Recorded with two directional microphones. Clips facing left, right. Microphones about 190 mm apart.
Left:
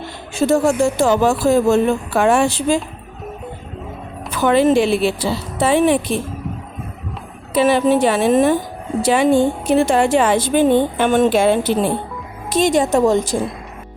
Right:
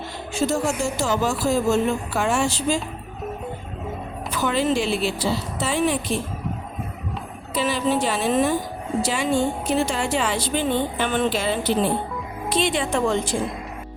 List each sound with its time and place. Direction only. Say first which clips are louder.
0.3 s speech: left 8 dB; 60° left (ahead or behind)
4.4 s speech: left 9 dB; 60° left (ahead or behind)
7.5 s a woman's voice: left 8 dB; 60° left (ahead or behind); by 13.4 s 40° left (ahead or behind)